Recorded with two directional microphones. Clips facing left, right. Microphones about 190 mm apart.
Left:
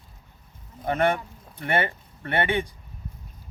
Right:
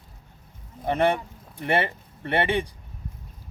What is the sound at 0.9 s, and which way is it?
Speech, 30° right (ahead or behind).